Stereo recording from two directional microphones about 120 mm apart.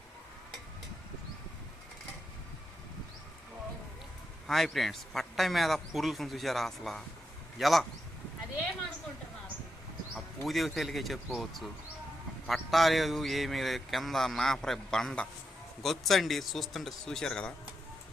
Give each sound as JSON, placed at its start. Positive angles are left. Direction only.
{"t": 4.4, "sound": "speech", "side_deg": 0}
{"t": 10.2, "sound": "speech", "side_deg": 0}